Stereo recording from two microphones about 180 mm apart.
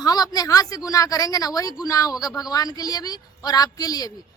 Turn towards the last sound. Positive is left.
turn(degrees=20)  # may be behind; listen again after turning